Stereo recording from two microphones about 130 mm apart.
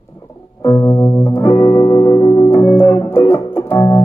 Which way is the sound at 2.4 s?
20° left (ahead or behind).